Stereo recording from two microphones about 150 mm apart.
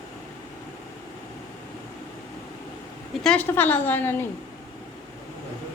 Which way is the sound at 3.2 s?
10° left (ahead or behind).